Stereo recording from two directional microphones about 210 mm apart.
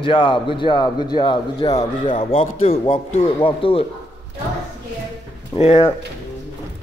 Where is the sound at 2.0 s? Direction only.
35° left (ahead or behind).